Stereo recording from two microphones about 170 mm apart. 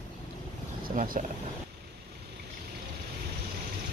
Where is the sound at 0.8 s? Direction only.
55° right (ahead or behind).